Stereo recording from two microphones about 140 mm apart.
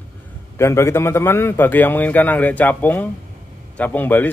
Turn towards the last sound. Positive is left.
turn(degrees=15)  # may be behind; listen again after turning